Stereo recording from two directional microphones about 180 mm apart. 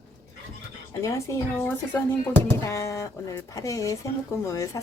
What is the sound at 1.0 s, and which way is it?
A woman's voice, 15° left (ahead or behind).